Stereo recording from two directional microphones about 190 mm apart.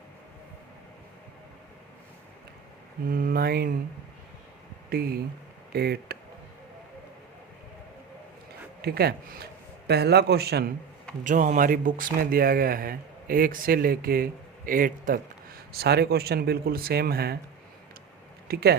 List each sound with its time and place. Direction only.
3.1 s speech: 45° right (ahead or behind)
4.9 s speech: 55° right (ahead or behind)
8.8 s a man's voice: 55° right (ahead or behind)
11.2 s speech: 45° right (ahead or behind)
18.4 s speech: 55° right (ahead or behind)